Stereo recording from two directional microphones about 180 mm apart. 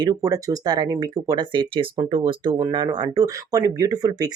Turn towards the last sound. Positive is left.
turn(degrees=-20)  # may be behind; listen again after turning